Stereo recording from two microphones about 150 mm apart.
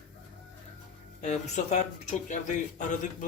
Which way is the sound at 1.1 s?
50° left (ahead or behind).